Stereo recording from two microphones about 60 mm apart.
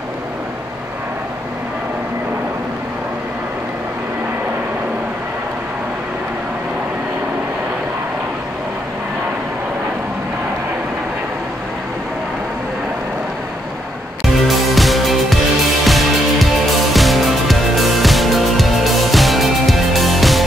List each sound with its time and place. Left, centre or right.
14.5 s music: centre